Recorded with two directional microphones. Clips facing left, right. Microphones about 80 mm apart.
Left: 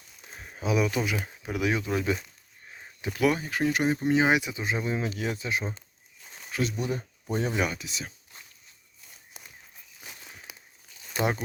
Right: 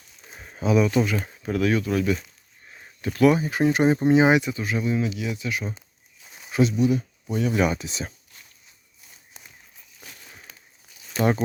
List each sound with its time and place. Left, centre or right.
0.3 s speech: centre; by 2.1 s left
2.2 s a sound: centre
3.3 s speech: centre
3.6 s speech: right
4.3 s speech: centre
4.5 s speech: left
6.2 s a sound: centre
6.7 s speech: left
7.8 s speech: right
9.4 s walk: centre
10.5 s a sound: centre